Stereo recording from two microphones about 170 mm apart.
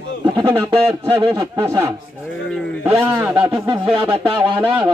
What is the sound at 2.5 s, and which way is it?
Speech, 5° left (ahead or behind).